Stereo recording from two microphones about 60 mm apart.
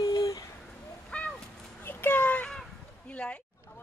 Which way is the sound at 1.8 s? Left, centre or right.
Left.